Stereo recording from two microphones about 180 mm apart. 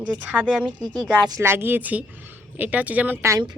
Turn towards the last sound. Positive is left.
turn(degrees=-15)  # may be behind; listen again after turning